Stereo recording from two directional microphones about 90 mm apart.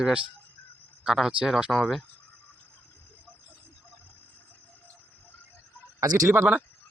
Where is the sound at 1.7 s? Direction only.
5° left (ahead or behind).